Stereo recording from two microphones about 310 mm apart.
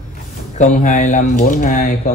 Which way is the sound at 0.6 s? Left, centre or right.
Left.